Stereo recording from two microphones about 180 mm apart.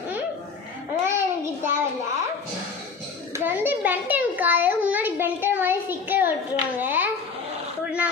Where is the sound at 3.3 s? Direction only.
10° right (ahead or behind).